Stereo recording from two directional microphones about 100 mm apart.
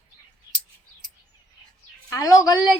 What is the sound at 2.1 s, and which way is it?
Speech, 35° left (ahead or behind).